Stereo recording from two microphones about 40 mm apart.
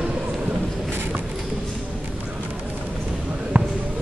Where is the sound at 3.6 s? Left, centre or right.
Right.